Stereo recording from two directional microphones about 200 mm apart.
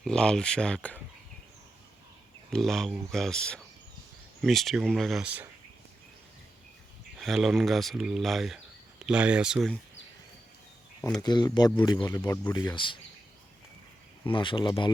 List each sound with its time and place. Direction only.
0.0 s speech: 5° left (ahead or behind)
2.5 s speech: centre (ahead or behind)
7.2 s speech: centre (ahead or behind)
11.2 s speech: 20° left (ahead or behind)
14.3 s speech: 25° left (ahead or behind)